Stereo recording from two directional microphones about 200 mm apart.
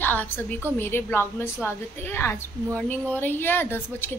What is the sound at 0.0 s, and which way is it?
A woman's voice, 10° left (ahead or behind).